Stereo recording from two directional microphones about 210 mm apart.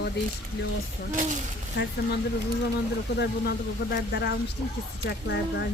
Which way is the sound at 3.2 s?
50° left (ahead or behind).